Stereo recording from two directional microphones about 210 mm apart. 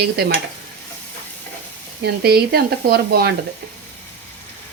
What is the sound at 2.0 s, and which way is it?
Speech, 50° right (ahead or behind).